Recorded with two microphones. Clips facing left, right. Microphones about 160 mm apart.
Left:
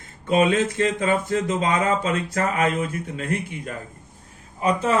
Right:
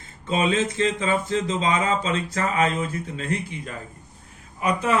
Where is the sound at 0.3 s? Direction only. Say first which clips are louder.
Left 3 dB; 55° left (ahead or behind).